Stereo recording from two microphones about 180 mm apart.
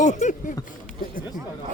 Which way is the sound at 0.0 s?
40° left (ahead or behind).